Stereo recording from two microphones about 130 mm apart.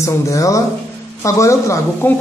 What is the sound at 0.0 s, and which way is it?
A man's voice, 25° left (ahead or behind).